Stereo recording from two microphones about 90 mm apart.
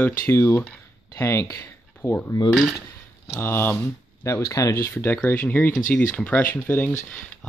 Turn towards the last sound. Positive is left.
turn(degrees=20)  # may be behind; listen again after turning